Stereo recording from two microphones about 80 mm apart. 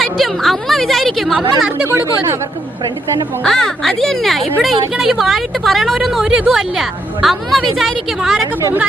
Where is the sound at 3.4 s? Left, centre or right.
Centre.